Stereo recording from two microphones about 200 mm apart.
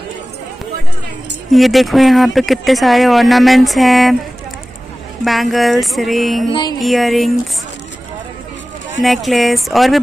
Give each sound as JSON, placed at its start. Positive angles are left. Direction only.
{"t": 1.5, "sound": "speech", "side_deg": 0}
{"t": 5.2, "sound": "speech", "side_deg": 0}
{"t": 6.5, "sound": "music", "side_deg": 20}
{"t": 6.8, "sound": "speech", "side_deg": 0}
{"t": 9.0, "sound": "speech", "side_deg": 0}